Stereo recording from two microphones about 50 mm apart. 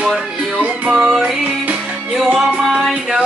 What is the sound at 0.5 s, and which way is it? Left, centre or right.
Music, right.